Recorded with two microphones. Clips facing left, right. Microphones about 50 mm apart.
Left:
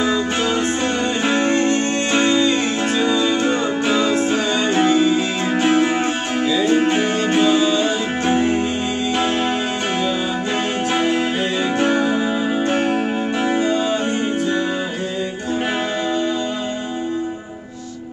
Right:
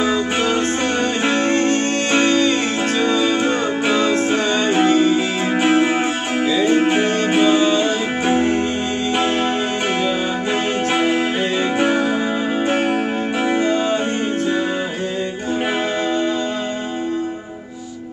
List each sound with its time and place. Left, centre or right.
0.0 s music: centre
1.5 s music: right
4.3 s music: centre
4.8 s music: right
5.1 s music: centre
11.0 s music: centre
11.8 s music: centre